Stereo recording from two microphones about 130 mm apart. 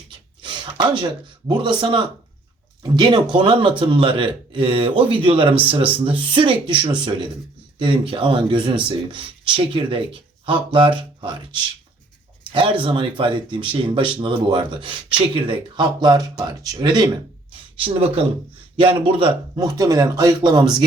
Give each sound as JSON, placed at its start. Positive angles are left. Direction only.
{"t": 0.4, "sound": "speech", "side_deg": -40}
{"t": 12.5, "sound": "speech", "side_deg": -40}
{"t": 19.5, "sound": "speech", "side_deg": -30}